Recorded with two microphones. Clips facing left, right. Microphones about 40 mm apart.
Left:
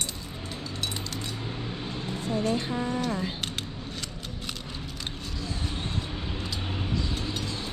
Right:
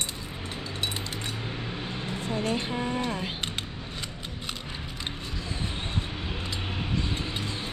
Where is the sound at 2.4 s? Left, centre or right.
Right.